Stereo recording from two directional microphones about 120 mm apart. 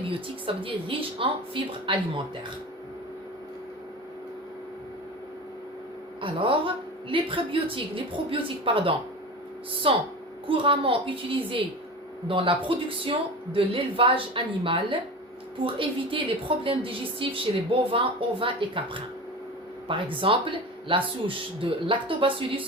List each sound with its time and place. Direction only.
0.0 s speech: 50° right (ahead or behind)
6.2 s speech: 45° right (ahead or behind)